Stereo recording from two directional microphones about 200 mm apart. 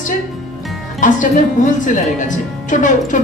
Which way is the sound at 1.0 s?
40° left (ahead or behind).